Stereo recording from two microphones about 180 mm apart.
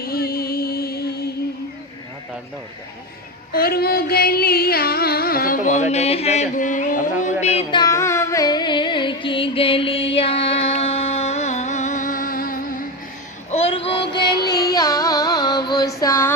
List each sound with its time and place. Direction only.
0.0 s music: 55° left (ahead or behind)
3.5 s music: 55° left (ahead or behind)
7.4 s music: 30° left (ahead or behind); by 12.8 s 50° left (ahead or behind)
13.5 s music: 35° left (ahead or behind)
14.3 s carnatic music: 65° left (ahead or behind)
14.5 s music: 20° left (ahead or behind)
16.0 s a sound: 15° left (ahead or behind)